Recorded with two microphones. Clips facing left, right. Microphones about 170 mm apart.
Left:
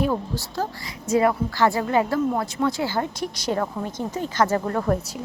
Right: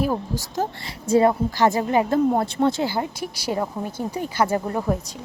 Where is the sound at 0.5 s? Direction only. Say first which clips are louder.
Right 3 dB; 25° right (ahead or behind).